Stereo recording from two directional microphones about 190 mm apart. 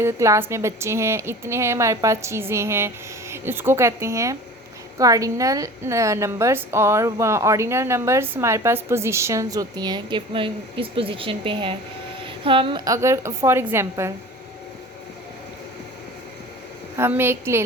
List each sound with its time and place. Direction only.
0.0 s a woman's voice: 15° right (ahead or behind)
17.0 s a woman's voice: 10° right (ahead or behind)